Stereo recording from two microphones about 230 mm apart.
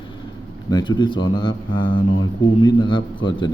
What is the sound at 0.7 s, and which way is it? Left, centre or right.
A man's voice, centre.